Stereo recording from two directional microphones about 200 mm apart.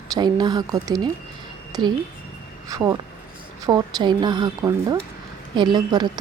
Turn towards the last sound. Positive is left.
turn(degrees=-20)  # may be behind; listen again after turning